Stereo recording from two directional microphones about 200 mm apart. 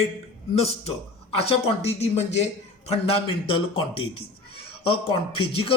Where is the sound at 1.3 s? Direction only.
30° left (ahead or behind).